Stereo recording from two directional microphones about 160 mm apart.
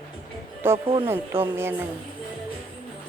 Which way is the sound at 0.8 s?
35° right (ahead or behind).